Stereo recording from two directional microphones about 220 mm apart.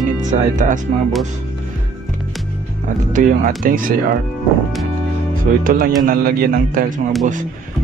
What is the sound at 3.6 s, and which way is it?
Speech, 40° right (ahead or behind).